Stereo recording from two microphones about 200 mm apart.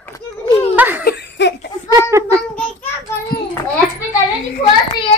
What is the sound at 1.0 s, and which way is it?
Laughter, 55° left (ahead or behind).